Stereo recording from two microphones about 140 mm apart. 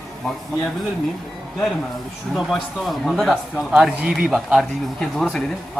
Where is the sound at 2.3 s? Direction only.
Centre (ahead or behind).